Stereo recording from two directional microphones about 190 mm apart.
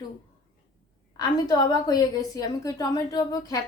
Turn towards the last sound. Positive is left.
turn(degrees=20)  # may be behind; listen again after turning